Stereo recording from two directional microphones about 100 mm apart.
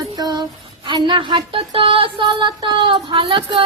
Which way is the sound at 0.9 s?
55° right (ahead or behind).